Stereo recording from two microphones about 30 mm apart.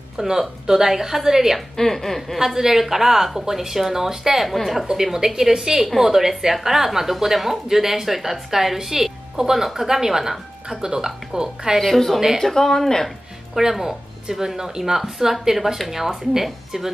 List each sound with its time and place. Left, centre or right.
0.2 s speech: centre
1.8 s speech: centre
2.3 s speech: centre
4.5 s a woman's voice: centre
4.9 s speech: centre
11.8 s a woman's voice: centre
12.4 s speech: centre
13.6 s speech: centre